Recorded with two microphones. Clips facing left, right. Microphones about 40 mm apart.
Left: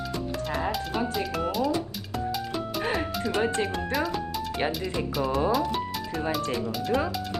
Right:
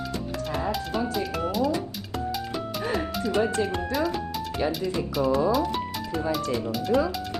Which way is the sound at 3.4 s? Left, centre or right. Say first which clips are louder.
Right 1 dB; left.